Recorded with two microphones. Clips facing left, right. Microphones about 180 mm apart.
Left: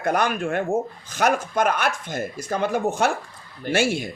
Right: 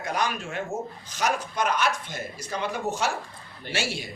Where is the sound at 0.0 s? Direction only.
55° left (ahead or behind).